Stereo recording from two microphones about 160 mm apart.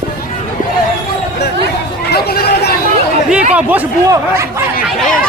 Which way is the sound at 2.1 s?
80° left.